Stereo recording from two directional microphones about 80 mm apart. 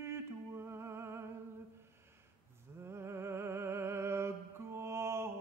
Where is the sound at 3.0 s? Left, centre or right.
Right.